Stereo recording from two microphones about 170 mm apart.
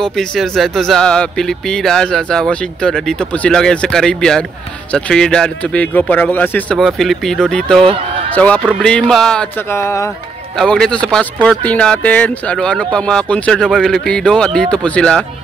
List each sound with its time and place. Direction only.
0.0 s speech: centre (ahead or behind)
7.8 s speech: 35° right (ahead or behind)
8.4 s speech: 5° left (ahead or behind)
9.7 s speech: 15° left (ahead or behind)
10.6 s speech: 5° left (ahead or behind)